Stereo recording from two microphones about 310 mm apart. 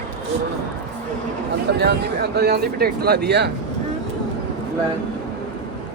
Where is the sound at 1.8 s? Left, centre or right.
Right.